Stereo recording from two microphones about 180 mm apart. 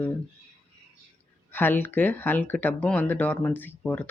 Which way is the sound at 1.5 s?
10° left (ahead or behind).